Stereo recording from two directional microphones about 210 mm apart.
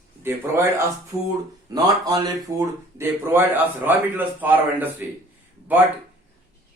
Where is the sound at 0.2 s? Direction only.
10° right (ahead or behind).